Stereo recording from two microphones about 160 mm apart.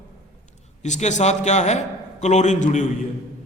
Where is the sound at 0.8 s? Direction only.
45° left (ahead or behind).